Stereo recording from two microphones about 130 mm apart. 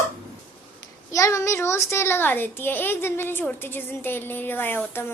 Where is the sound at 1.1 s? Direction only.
25° left (ahead or behind).